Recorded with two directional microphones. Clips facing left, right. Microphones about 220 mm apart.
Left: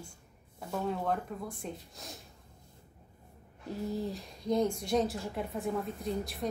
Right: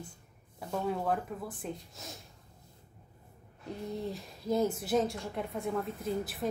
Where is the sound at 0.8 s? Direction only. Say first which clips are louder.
Right 1 dB; 5° right (ahead or behind).